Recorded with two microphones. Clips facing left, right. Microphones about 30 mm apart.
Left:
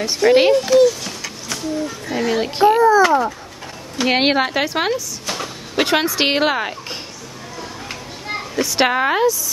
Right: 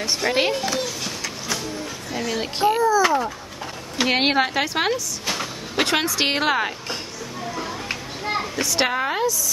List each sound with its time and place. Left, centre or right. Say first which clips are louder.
0.0 s a woman's voice: left 8 dB; centre
0.6 s a sound: left 12 dB; centre
2.1 s a child's voice: left 7 dB; centre
3.0 s babbling: left 5 dB; centre
4.1 s a woman's voice: left 3 dB; centre
7.5 s children playing: even; centre
8.5 s a child's voice: left 7 dB; centre
8.8 s speech: left 7 dB; left